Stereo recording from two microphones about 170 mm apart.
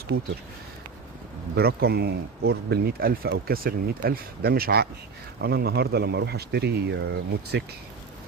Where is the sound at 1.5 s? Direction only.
70° right (ahead or behind); by 7.7 s 90° right.